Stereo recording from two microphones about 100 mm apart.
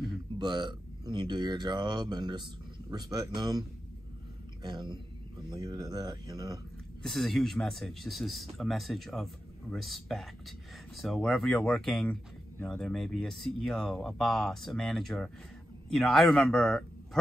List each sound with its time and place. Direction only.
0.4 s speech: 50° right (ahead or behind)
4.6 s speech: 45° right (ahead or behind)
7.0 s speech: centre (ahead or behind)